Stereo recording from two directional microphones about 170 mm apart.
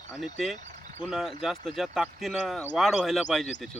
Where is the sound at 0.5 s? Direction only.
45° right (ahead or behind).